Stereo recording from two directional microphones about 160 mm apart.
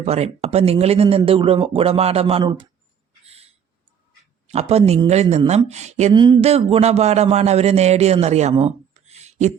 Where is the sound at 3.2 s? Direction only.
40° right (ahead or behind).